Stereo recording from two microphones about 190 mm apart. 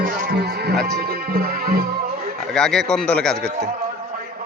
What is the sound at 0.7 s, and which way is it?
Speech, centre (ahead or behind).